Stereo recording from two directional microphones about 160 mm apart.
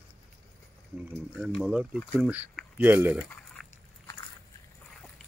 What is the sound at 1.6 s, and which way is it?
Speech, 10° right (ahead or behind).